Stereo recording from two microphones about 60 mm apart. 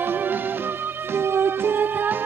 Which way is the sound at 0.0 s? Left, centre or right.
Right.